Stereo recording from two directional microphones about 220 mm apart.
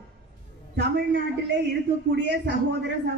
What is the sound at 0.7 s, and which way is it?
Speech, 50° right (ahead or behind).